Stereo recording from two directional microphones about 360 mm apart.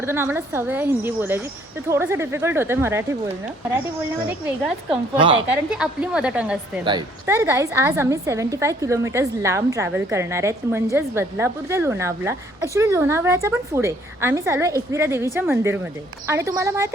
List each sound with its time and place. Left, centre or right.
0.0 s a woman's voice: centre
4.4 s a woman's voice: centre